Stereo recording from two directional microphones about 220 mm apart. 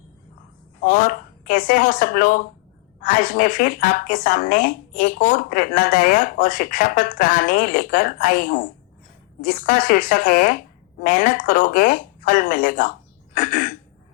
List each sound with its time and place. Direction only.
0.8 s a woman's voice: 40° left (ahead or behind)